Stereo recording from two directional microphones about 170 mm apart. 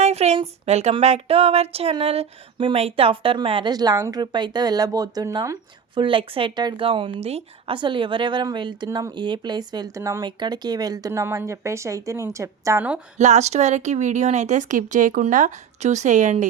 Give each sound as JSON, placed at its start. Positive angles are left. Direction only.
{"t": 0.0, "sound": "speech", "side_deg": -40}
{"t": 13.1, "sound": "speech", "side_deg": -40}